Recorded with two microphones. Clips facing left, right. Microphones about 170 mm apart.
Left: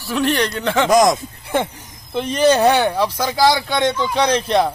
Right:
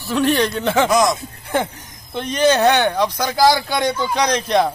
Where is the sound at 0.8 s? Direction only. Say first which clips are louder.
Left 5 dB; 45° left (ahead or behind).